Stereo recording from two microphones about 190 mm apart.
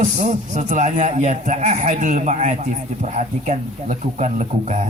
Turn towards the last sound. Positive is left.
turn(degrees=-35)  # may be behind; listen again after turning